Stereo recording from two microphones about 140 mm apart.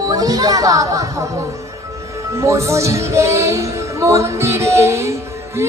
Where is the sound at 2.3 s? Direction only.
20° right (ahead or behind).